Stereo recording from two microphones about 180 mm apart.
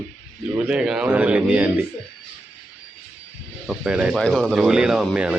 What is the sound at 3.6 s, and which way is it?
Speech, 5° right (ahead or behind).